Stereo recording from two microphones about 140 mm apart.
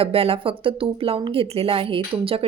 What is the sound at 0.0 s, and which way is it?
Speech, 45° right (ahead or behind).